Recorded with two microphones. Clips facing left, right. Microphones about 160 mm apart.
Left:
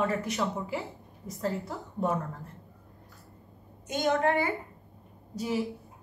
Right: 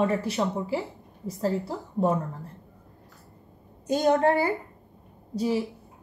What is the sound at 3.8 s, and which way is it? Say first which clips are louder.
Speech: right 5 dB; 35° right (ahead or behind).